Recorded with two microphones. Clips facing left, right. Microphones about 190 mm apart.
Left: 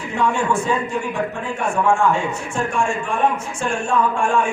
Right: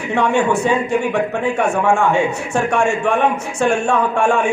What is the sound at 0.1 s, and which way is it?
A man's voice, 70° right (ahead or behind).